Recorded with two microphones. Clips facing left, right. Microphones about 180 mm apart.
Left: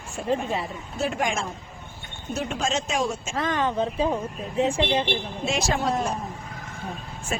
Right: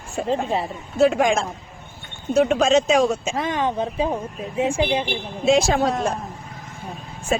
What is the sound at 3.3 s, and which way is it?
Speech, 15° right (ahead or behind).